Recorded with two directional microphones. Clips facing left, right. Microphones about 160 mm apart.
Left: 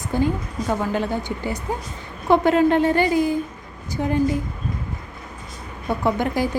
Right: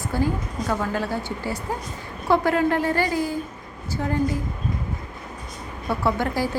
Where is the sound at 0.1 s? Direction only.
20° left (ahead or behind).